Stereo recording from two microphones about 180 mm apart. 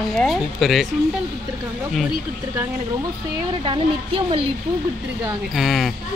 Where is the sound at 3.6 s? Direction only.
30° right (ahead or behind).